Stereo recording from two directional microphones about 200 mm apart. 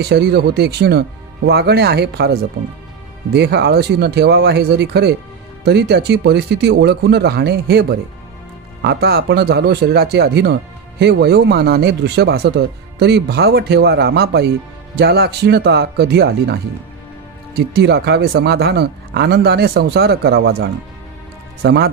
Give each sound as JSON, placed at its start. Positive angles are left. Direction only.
{"t": 0.0, "sound": "speech", "side_deg": -55}
{"t": 17.6, "sound": "speech", "side_deg": -55}